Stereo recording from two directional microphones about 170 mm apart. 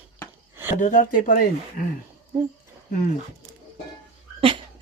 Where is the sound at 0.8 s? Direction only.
45° left (ahead or behind).